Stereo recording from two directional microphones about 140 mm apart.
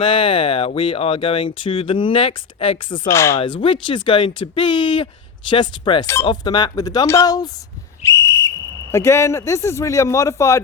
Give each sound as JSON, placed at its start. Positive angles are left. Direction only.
{"t": 0.0, "sound": "speech", "side_deg": 40}
{"t": 3.1, "sound": "speech", "side_deg": 20}
{"t": 3.3, "sound": "speech", "side_deg": 35}